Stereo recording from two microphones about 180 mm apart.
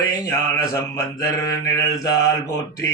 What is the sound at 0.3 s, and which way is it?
Speech, 15° left (ahead or behind).